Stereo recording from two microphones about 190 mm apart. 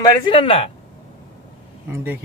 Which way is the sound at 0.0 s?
25° left (ahead or behind).